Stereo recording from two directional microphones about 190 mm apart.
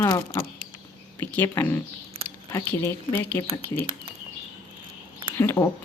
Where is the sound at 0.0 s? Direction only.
20° left (ahead or behind).